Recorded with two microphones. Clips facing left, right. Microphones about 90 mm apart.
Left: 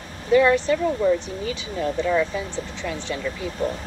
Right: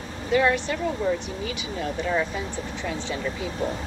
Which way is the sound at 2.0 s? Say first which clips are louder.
Left 3 dB; 15° right (ahead or behind).